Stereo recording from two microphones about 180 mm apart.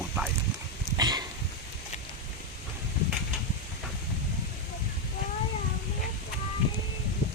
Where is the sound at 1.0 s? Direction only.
20° right (ahead or behind).